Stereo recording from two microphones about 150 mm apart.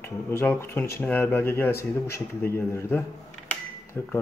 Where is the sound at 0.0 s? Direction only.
15° left (ahead or behind).